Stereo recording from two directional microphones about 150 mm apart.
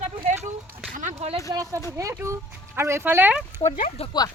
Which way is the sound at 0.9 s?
55° right (ahead or behind).